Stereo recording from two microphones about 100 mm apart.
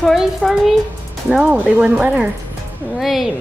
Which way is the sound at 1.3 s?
10° right (ahead or behind).